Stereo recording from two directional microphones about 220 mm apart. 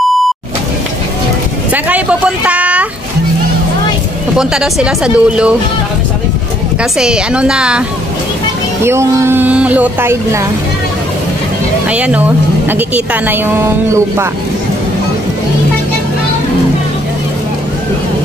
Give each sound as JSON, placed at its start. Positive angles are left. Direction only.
{"t": 1.7, "sound": "a sound", "side_deg": -5}
{"t": 4.4, "sound": "speech", "side_deg": -5}
{"t": 6.8, "sound": "speech", "side_deg": -5}
{"t": 8.8, "sound": "speech", "side_deg": -10}
{"t": 11.9, "sound": "speech", "side_deg": -5}